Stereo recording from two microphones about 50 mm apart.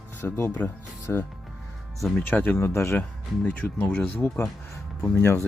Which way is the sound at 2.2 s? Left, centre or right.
Left.